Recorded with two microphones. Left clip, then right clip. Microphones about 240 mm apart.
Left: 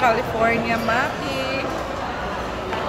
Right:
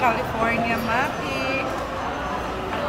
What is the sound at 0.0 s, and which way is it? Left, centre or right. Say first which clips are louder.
Speech: left 3 dB; centre.